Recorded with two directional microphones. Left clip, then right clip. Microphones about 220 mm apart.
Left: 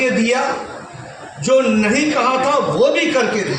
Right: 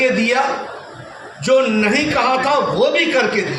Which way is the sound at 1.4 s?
40° right (ahead or behind).